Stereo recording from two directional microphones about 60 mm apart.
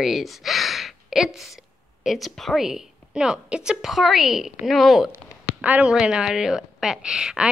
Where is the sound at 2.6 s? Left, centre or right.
Centre.